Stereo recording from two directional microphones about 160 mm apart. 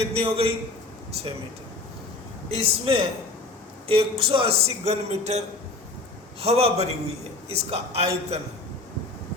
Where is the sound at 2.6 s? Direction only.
35° right (ahead or behind).